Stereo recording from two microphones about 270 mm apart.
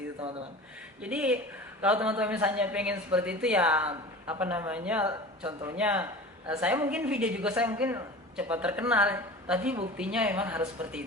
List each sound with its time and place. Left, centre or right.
1.0 s a woman's voice: centre